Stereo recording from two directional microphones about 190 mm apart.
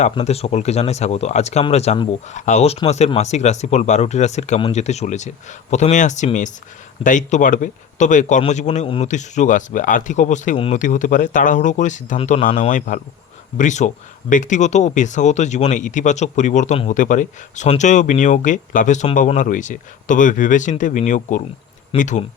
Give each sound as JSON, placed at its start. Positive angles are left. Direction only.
{"t": 0.0, "sound": "speech", "side_deg": 35}